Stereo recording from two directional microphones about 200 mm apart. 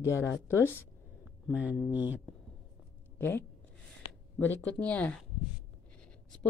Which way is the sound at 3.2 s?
10° left (ahead or behind).